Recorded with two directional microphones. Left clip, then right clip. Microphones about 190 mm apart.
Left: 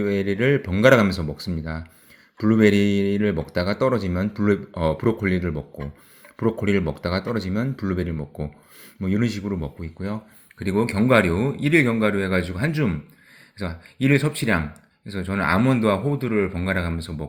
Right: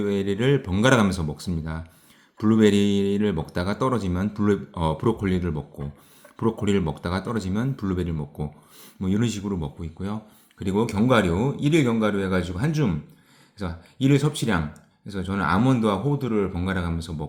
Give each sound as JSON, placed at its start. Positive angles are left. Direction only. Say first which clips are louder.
{"t": 0.0, "sound": "speech", "louder": "left 2 dB", "side_deg": 10}